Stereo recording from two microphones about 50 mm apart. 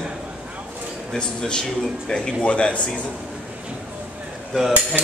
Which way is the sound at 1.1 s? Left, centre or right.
Centre.